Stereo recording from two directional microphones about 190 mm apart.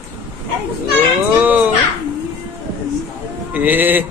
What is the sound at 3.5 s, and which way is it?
Speech, 10° right (ahead or behind).